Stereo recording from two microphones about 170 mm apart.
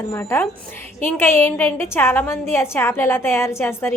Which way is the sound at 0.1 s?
15° left (ahead or behind).